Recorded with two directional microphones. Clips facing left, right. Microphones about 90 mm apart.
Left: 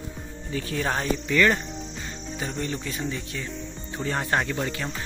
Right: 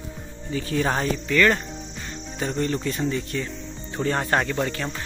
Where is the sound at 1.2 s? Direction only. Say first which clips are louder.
Right 2 dB; 15° left (ahead or behind).